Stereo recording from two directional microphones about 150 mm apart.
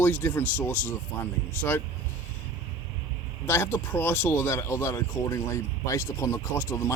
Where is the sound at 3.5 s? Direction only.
15° left (ahead or behind).